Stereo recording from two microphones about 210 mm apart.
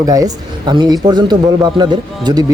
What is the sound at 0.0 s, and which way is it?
Speech, 15° right (ahead or behind).